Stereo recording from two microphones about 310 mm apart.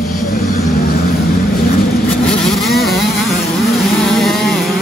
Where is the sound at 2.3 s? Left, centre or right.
Centre.